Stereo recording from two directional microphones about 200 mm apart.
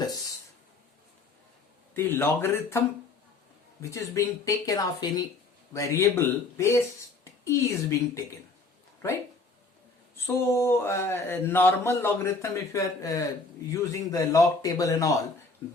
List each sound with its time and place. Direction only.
1.9 s speech: 10° left (ahead or behind)
10.3 s speech: 15° left (ahead or behind)